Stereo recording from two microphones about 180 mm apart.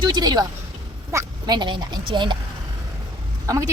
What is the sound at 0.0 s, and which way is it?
Speech, 25° right (ahead or behind).